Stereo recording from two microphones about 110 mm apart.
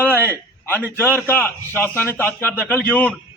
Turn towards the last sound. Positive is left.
turn(degrees=15)  # may be behind; listen again after turning